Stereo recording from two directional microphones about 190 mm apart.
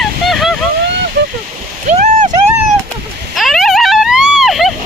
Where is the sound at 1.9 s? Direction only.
40° right (ahead or behind).